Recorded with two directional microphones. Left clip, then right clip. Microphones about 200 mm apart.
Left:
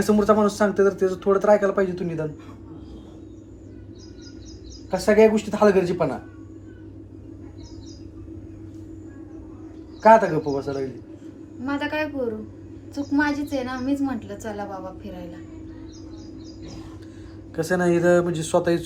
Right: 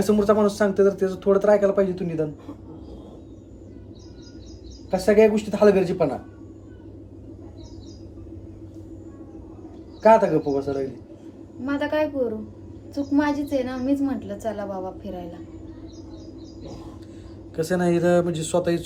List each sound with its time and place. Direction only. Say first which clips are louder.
0.0 s speech: even; centre (ahead or behind)
4.9 s speech: even; 5° right (ahead or behind)
10.0 s speech: left 1 dB; centre (ahead or behind)
11.6 s a woman's voice: right 2 dB; 20° right (ahead or behind)
13.1 s a woman's voice: right 1 dB; 15° right (ahead or behind)
17.6 s speech: left 1 dB; centre (ahead or behind)